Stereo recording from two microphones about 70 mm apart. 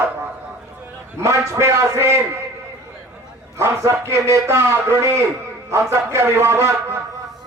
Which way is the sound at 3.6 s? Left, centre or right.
Right.